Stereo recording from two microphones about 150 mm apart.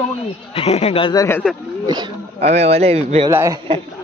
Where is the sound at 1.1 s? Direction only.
20° left (ahead or behind).